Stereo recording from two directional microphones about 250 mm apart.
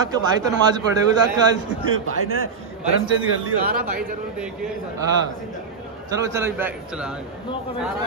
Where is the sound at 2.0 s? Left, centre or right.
Right.